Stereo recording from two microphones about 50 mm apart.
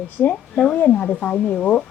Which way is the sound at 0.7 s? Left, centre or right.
Left.